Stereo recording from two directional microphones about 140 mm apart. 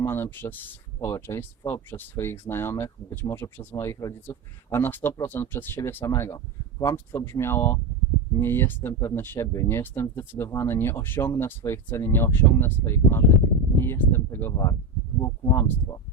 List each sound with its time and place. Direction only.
0.0 s speech: 15° left (ahead or behind)